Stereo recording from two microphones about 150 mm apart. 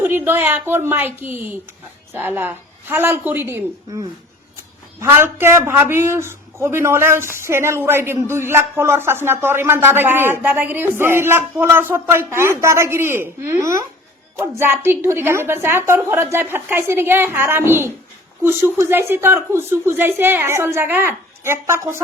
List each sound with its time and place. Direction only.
0.0 s speech: 15° right (ahead or behind)